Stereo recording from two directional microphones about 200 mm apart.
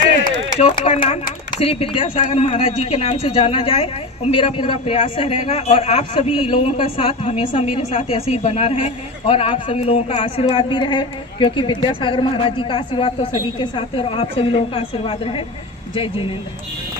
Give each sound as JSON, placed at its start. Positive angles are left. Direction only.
{"t": 0.2, "sound": "a man's voice", "side_deg": 30}